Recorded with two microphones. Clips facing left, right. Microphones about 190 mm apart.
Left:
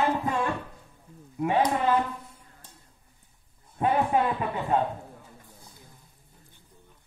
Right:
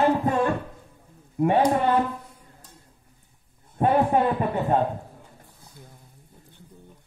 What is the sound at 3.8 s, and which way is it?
A man's voice, 40° right (ahead or behind).